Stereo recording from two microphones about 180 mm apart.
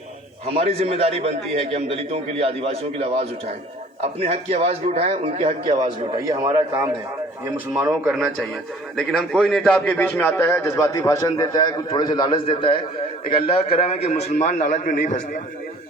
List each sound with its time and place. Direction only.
0.4 s a man's voice: 35° right (ahead or behind)
5.8 s a man's voice: 25° right (ahead or behind)
7.5 s a man's voice: 5° right (ahead or behind); by 15.4 s 50° left (ahead or behind)